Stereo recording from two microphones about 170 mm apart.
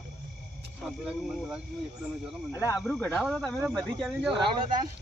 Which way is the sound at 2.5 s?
20° left (ahead or behind).